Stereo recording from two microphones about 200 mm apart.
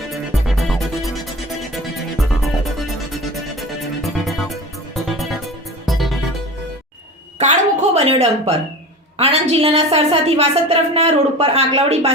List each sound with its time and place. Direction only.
0.4 s music: centre (ahead or behind)
7.3 s a sound: 35° right (ahead or behind)
9.1 s a woman's voice: 30° right (ahead or behind)